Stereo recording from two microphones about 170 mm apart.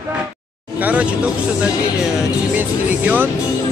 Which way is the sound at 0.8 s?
10° right (ahead or behind).